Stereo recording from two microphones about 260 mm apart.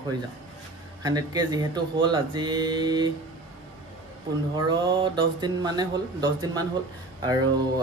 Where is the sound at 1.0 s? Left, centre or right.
Centre.